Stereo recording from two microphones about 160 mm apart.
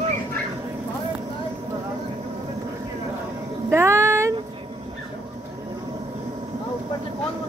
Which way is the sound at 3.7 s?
15° right (ahead or behind).